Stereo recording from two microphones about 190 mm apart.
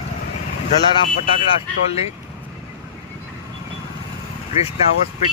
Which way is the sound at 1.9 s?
35° left (ahead or behind).